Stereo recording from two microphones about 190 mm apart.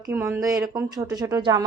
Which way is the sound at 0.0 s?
15° right (ahead or behind).